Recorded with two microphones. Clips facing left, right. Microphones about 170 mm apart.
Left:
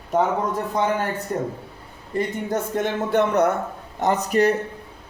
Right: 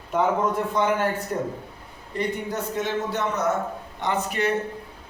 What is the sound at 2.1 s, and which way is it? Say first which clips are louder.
Speech: left 3 dB; 50° left (ahead or behind).